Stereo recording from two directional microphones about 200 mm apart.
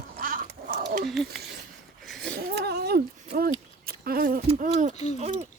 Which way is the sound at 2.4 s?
55° right (ahead or behind).